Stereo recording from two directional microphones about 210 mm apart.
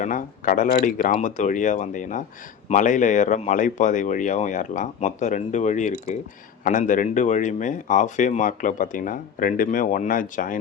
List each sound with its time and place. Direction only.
0.0 s speech: 40° left (ahead or behind)